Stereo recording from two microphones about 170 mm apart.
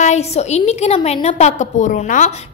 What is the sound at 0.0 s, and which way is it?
A woman's voice, 40° left (ahead or behind).